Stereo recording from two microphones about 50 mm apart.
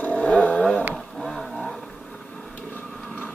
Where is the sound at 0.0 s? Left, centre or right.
Left.